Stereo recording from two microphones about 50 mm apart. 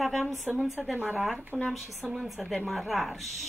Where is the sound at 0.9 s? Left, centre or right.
Right.